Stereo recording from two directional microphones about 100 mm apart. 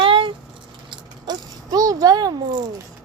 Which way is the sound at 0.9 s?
40° right (ahead or behind).